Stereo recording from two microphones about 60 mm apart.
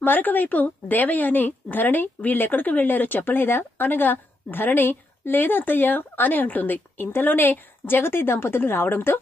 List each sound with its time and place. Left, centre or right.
0.0 s a woman's voice: left